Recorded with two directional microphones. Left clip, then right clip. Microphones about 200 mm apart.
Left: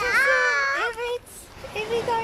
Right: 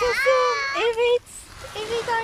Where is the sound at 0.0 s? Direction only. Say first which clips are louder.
Right 1 dB; 50° left (ahead or behind).